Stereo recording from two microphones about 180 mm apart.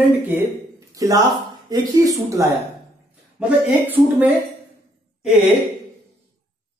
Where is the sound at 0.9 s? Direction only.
20° right (ahead or behind).